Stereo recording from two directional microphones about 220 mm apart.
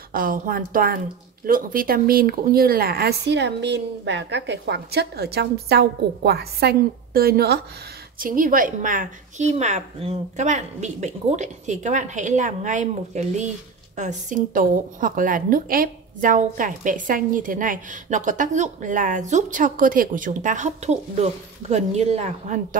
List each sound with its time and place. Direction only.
0.1 s a woman's voice: 40° right (ahead or behind)